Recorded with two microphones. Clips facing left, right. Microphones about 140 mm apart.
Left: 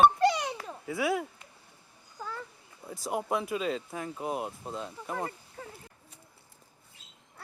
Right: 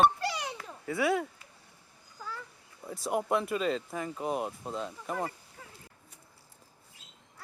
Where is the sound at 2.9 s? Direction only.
Centre (ahead or behind).